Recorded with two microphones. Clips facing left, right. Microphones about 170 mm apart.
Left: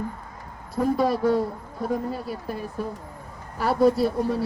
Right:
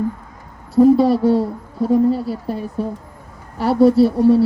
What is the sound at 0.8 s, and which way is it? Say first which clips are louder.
Speech: right 10 dB; 30° right (ahead or behind).